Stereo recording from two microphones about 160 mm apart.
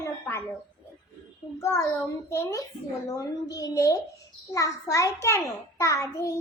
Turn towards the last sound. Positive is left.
turn(degrees=20)  # may be behind; listen again after turning